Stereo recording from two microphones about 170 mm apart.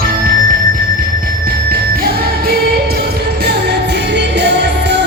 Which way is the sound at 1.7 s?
60° right (ahead or behind).